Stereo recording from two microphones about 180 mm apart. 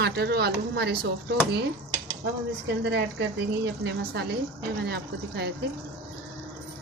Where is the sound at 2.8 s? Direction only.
80° right.